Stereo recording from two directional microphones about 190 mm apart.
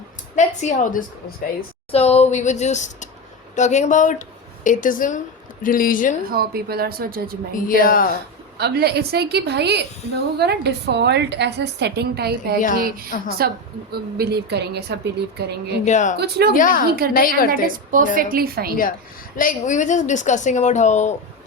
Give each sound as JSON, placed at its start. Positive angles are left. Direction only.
{"t": 0.3, "sound": "a woman's voice", "side_deg": 40}
{"t": 1.9, "sound": "a woman's voice", "side_deg": 30}
{"t": 6.3, "sound": "a woman's voice", "side_deg": -55}
{"t": 7.5, "sound": "a woman's voice", "side_deg": 45}
{"t": 8.5, "sound": "a woman's voice", "side_deg": -60}
{"t": 13.1, "sound": "a woman's voice", "side_deg": 50}
{"t": 13.9, "sound": "a woman's voice", "side_deg": -55}
{"t": 15.8, "sound": "a woman's voice", "side_deg": 40}
{"t": 16.1, "sound": "a woman's voice", "side_deg": -55}
{"t": 16.6, "sound": "a woman's voice", "side_deg": 45}
{"t": 17.5, "sound": "a woman's voice", "side_deg": -45}
{"t": 19.4, "sound": "a woman's voice", "side_deg": 45}